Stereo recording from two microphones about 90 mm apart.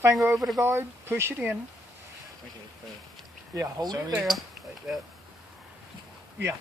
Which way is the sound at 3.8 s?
50° right (ahead or behind).